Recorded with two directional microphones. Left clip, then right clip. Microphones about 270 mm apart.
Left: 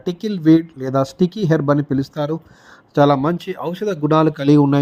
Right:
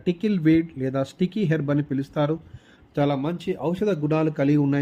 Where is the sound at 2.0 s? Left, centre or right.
Centre.